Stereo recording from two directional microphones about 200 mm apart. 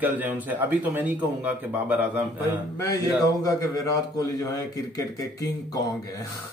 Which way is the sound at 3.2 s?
20° left (ahead or behind).